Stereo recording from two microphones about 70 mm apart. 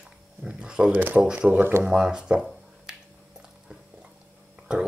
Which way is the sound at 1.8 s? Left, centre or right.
Centre.